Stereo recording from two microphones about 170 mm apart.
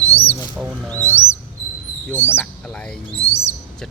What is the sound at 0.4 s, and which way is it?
Music, 10° right (ahead or behind).